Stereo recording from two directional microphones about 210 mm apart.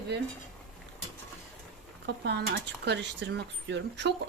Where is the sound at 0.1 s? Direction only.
55° right (ahead or behind).